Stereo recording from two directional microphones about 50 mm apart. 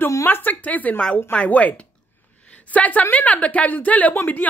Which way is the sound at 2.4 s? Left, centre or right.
Left.